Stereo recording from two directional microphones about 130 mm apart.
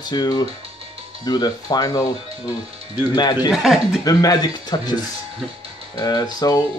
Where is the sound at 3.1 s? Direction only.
35° left (ahead or behind).